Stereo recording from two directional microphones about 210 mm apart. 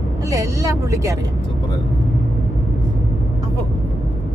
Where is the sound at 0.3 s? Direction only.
15° right (ahead or behind).